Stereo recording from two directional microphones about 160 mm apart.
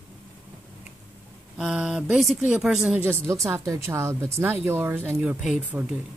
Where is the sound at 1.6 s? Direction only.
10° right (ahead or behind).